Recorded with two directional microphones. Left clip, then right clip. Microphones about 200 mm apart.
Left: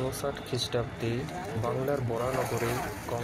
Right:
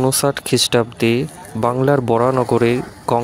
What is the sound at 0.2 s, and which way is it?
Speech, 55° right (ahead or behind).